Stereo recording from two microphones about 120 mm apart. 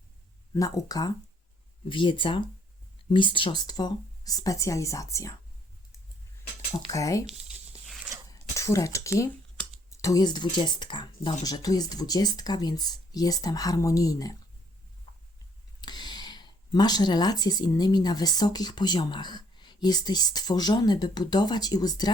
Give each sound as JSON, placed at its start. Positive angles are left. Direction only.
{"t": 0.5, "sound": "speech", "side_deg": 25}
{"t": 1.9, "sound": "speech", "side_deg": 45}
{"t": 6.9, "sound": "speech", "side_deg": 30}
{"t": 8.3, "sound": "speech", "side_deg": 25}
{"t": 15.1, "sound": "a sound", "side_deg": 45}
{"t": 15.8, "sound": "speech", "side_deg": 35}